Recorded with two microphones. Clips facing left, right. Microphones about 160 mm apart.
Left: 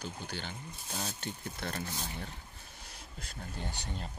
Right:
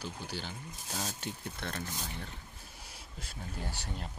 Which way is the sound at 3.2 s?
5° right (ahead or behind).